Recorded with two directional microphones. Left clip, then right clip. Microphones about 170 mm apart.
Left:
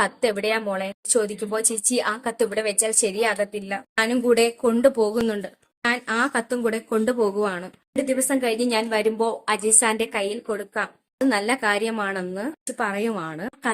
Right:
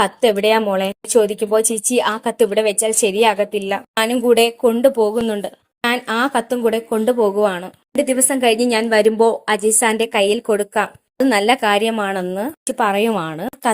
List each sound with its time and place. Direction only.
0.0 s a woman's voice: 20° right (ahead or behind)
5.8 s a woman's voice: 30° right (ahead or behind)